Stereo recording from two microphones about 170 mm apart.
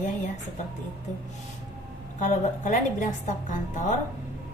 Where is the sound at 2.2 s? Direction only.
45° left (ahead or behind).